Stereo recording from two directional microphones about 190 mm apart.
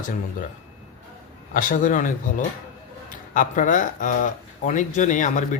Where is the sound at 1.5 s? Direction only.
45° left (ahead or behind).